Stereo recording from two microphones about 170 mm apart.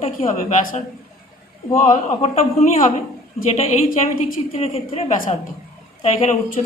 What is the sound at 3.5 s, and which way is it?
A woman's voice, 45° left (ahead or behind).